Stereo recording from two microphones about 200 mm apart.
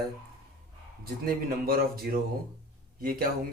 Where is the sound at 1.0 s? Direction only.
50° right (ahead or behind).